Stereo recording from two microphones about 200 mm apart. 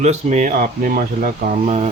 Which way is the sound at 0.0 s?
35° right (ahead or behind).